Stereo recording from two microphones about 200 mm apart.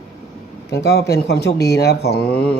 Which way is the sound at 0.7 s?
55° left (ahead or behind).